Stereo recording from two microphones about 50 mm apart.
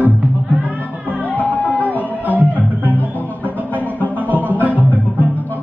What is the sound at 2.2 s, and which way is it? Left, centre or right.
Music, right.